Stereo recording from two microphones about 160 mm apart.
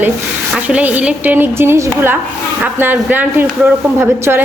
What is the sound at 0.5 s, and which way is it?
Speech, 10° right (ahead or behind).